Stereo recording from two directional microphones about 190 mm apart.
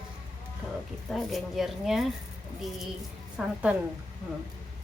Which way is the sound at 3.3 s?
5° right (ahead or behind).